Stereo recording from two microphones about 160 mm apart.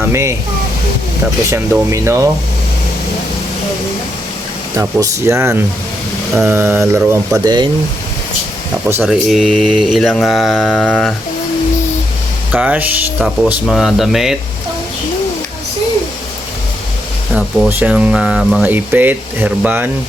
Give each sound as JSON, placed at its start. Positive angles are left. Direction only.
{"t": 0.0, "sound": "speech", "side_deg": -15}
{"t": 1.9, "sound": "speech", "side_deg": -20}
{"t": 4.8, "sound": "speech", "side_deg": -20}
{"t": 7.4, "sound": "speech", "side_deg": -25}
{"t": 9.0, "sound": "mantra", "side_deg": 0}
{"t": 12.5, "sound": "mantra", "side_deg": -10}
{"t": 17.7, "sound": "speech", "side_deg": -10}